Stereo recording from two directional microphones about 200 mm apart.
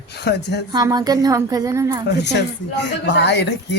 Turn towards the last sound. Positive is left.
turn(degrees=60)  # may be behind; listen again after turning